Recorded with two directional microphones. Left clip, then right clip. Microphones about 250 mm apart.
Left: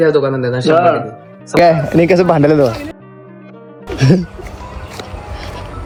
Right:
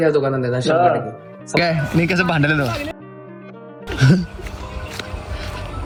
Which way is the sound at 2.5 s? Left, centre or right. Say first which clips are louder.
Left 8 dB; right.